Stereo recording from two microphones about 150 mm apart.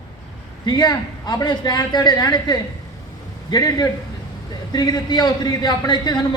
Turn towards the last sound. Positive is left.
turn(degrees=30)  # may be behind; listen again after turning